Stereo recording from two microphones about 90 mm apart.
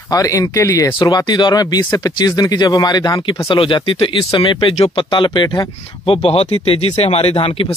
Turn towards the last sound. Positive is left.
turn(degrees=90)